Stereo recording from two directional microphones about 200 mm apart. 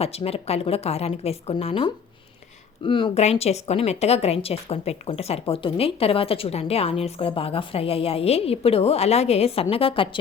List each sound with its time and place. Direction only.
0.0 s a woman's voice: 30° left (ahead or behind)